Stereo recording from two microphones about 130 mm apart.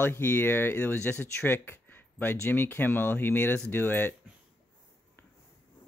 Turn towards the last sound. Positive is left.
turn(degrees=15)  # may be behind; listen again after turning